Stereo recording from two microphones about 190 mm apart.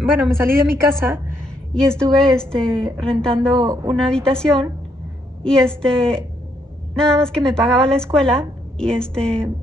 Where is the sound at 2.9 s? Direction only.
5° left (ahead or behind).